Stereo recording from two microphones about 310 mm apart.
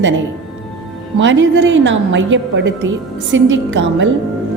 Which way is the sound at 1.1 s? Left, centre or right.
Right.